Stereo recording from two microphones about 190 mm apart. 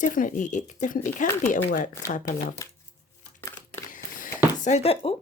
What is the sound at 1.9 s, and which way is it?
Speech, 15° left (ahead or behind).